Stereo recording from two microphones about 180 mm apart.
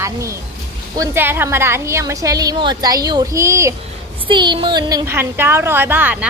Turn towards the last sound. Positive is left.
turn(degrees=-10)  # may be behind; listen again after turning